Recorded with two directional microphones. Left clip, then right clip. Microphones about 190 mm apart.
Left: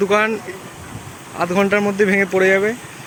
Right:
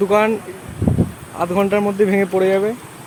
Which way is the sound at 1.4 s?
Centre (ahead or behind).